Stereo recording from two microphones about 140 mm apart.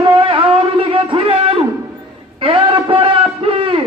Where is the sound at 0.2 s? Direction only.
40° right (ahead or behind).